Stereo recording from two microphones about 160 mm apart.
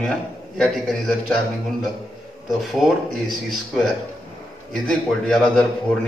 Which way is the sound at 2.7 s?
Centre (ahead or behind).